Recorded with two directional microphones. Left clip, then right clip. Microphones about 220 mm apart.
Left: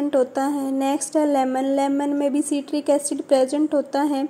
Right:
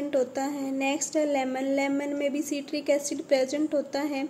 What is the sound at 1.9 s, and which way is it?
Speech, 20° left (ahead or behind).